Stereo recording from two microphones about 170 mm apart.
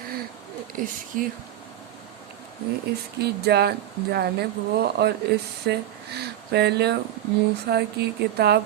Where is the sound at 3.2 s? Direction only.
70° right (ahead or behind).